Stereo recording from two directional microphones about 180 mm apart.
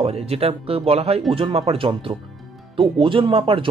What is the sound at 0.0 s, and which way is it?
Speech, 35° right (ahead or behind).